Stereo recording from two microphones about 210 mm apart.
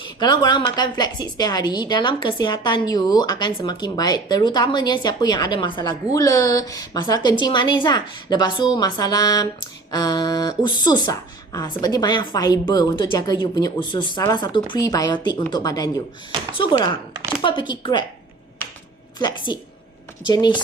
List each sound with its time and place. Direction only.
0.0 s a woman's voice: 20° left (ahead or behind)
8.7 s a sound: 20° left (ahead or behind)
9.9 s a woman's voice: 20° left (ahead or behind)
14.7 s a sound: 15° left (ahead or behind)
16.6 s a woman's voice: 20° left (ahead or behind)
20.2 s a woman's voice: 20° left (ahead or behind)